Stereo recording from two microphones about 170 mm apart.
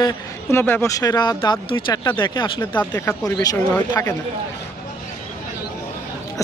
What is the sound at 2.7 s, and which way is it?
Speech, 10° left (ahead or behind).